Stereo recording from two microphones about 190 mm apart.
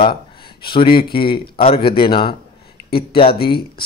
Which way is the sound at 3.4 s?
55° left (ahead or behind).